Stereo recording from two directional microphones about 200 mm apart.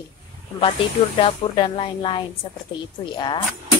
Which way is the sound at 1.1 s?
25° left (ahead or behind).